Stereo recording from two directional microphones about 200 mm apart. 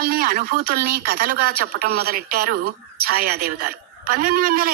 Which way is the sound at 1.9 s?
90° right.